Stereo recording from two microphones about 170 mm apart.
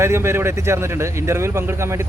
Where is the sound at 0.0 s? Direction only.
15° right (ahead or behind).